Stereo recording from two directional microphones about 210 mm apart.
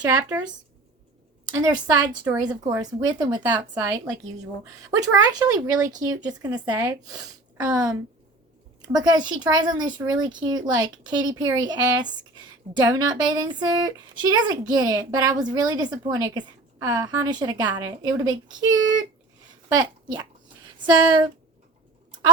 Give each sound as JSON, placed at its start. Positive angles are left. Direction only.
{"t": 0.0, "sound": "speech", "side_deg": -15}
{"t": 0.3, "sound": "speech", "side_deg": -5}
{"t": 1.5, "sound": "a woman's voice", "side_deg": -20}
{"t": 19.6, "sound": "a woman's voice", "side_deg": -20}